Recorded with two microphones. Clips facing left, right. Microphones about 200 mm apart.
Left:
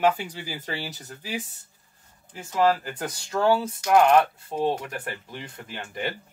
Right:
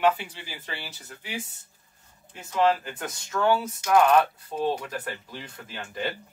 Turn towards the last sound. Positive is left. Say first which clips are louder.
# left 2 dB
turn(degrees=20)  # may be behind; listen again after turning